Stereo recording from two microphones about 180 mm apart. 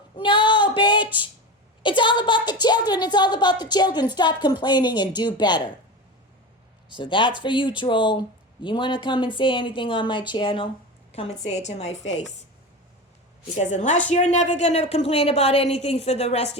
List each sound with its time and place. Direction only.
0.2 s female singing: 25° left (ahead or behind)
1.8 s a woman's voice: 25° left (ahead or behind)
6.9 s a woman's voice: 25° left (ahead or behind)
12.0 s a woman's voice: 80° left
13.6 s a woman's voice: 40° left (ahead or behind)